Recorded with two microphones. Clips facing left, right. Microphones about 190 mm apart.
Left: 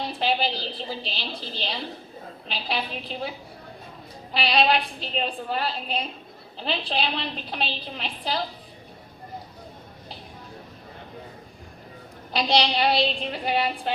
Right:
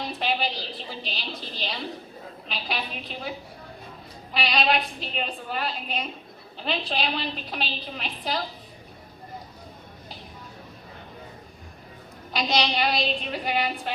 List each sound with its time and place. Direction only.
0.1 s a woman's voice: 30° left (ahead or behind)
4.4 s a woman's voice: 30° left (ahead or behind)
12.3 s a woman's voice: 30° left (ahead or behind)